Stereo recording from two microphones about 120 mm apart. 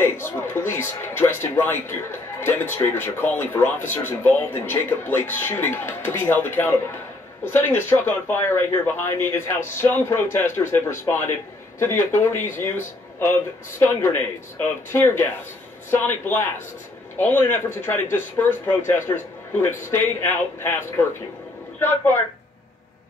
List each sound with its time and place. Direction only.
0.0 s a man's voice: 20° left (ahead or behind)
14.9 s a man's voice: 20° left (ahead or behind)